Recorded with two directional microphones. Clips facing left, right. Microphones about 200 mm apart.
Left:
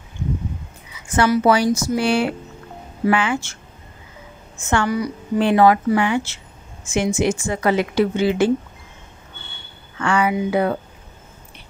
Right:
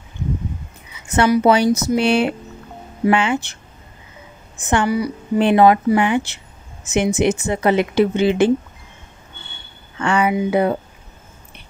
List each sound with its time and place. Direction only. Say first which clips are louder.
1.0 s a woman's voice: right 2 dB; 20° right (ahead or behind)
4.6 s a woman's voice: right 2 dB; 15° right (ahead or behind)
5.4 s a woman's voice: right 2 dB; 20° right (ahead or behind)
9.9 s a woman's voice: right 2 dB; 25° right (ahead or behind)